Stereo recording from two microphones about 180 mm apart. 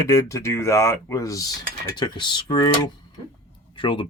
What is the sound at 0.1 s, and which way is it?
Speech, 15° left (ahead or behind).